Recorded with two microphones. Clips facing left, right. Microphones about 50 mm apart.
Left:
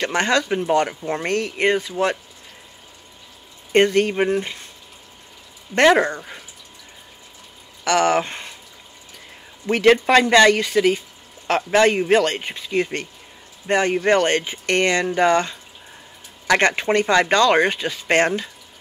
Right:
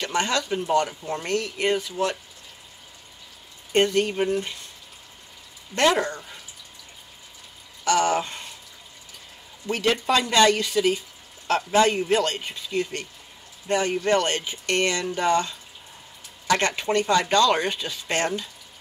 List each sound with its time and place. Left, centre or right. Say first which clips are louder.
0.0 s speech: left 5 dB; left
3.7 s speech: left 5 dB; left
5.8 s speech: left 6 dB; left
7.8 s speech: left 4 dB; left
9.7 s speech: left 8 dB; left